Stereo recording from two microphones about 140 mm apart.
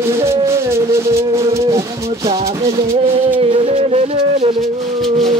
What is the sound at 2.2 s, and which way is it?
Music, 45° right (ahead or behind).